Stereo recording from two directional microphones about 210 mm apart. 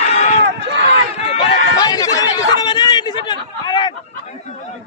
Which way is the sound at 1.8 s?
15° left (ahead or behind).